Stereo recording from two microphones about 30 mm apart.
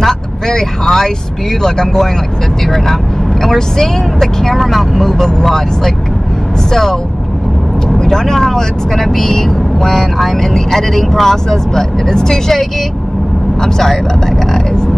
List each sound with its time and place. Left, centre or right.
0.0 s speech: centre
2.6 s speech: centre
8.1 s speech: centre